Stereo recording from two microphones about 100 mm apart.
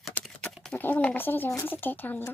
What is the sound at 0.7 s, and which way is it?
Speech, 15° left (ahead or behind).